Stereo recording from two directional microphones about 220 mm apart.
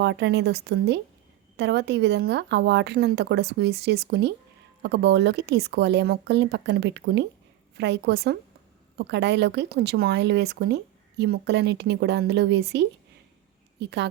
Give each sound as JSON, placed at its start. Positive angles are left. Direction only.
{"t": 0.0, "sound": "speech", "side_deg": -50}